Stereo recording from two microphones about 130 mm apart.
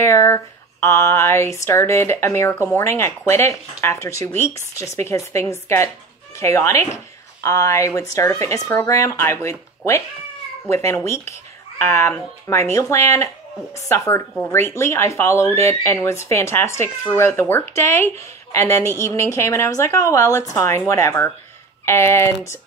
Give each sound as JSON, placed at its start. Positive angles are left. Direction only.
{"t": 0.0, "sound": "speech", "side_deg": 20}